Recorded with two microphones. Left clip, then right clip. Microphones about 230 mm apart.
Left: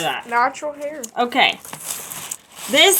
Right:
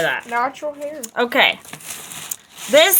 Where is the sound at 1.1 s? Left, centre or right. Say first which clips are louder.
Right 1 dB; right.